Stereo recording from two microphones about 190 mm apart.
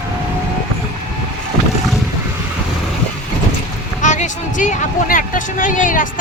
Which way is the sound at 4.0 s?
40° left (ahead or behind).